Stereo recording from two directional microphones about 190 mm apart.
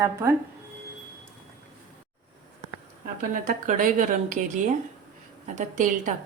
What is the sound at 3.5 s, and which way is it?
A woman's voice, 40° right (ahead or behind).